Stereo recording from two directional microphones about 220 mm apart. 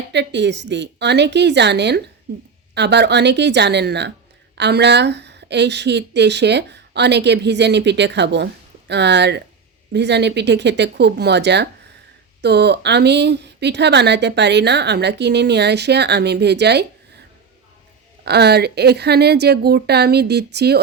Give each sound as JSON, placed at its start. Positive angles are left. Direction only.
{"t": 0.1, "sound": "speech", "side_deg": -50}
{"t": 18.3, "sound": "speech", "side_deg": -50}